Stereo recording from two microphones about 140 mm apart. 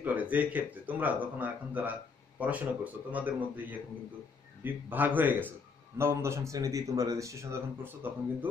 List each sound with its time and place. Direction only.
0.0 s speech: 10° right (ahead or behind)
4.8 s speech: 15° right (ahead or behind)